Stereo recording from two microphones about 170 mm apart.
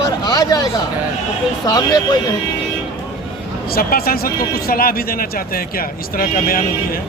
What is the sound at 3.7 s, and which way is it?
Speech, 60° left (ahead or behind).